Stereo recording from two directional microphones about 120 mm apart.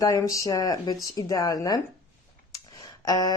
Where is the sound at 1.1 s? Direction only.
30° left (ahead or behind).